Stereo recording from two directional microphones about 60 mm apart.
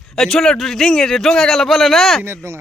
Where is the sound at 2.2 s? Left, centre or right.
Right.